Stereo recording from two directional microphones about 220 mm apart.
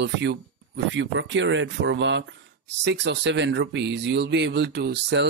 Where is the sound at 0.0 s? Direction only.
50° right (ahead or behind).